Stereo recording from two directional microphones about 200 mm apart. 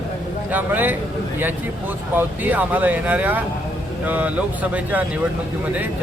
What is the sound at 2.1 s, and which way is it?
Speech, 10° right (ahead or behind).